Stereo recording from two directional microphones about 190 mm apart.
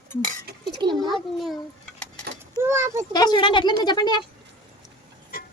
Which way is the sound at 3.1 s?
20° left (ahead or behind).